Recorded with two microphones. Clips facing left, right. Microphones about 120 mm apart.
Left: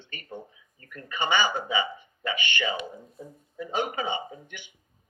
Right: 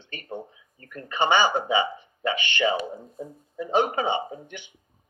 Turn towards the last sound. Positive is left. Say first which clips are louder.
# right 5 dB
turn(degrees=-50)  # may be behind; listen again after turning